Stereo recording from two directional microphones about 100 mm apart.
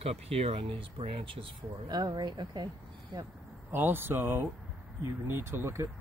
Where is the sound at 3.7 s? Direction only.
20° right (ahead or behind).